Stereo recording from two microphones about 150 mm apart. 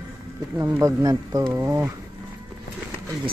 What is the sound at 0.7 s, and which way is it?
Speech, 20° right (ahead or behind).